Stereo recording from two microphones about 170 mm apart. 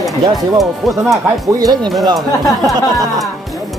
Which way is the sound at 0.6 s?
Centre (ahead or behind).